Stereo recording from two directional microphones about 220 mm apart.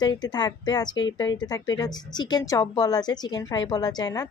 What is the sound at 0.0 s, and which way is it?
Speech, 20° left (ahead or behind).